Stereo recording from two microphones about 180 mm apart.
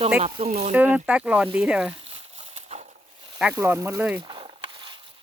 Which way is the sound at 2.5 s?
35° right (ahead or behind).